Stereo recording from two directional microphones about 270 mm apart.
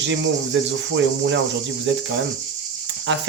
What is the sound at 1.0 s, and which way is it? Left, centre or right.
Speech, right.